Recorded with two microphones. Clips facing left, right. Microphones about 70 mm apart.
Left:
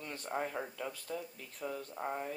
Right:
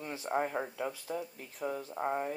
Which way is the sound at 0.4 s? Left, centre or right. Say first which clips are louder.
Right 4 dB; right.